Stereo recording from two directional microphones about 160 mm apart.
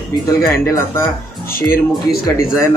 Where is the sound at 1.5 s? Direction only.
65° left (ahead or behind).